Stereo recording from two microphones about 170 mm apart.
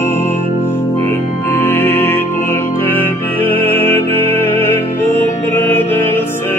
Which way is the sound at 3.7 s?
15° left (ahead or behind).